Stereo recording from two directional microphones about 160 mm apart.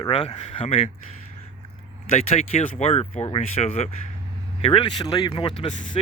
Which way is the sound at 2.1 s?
45° left (ahead or behind).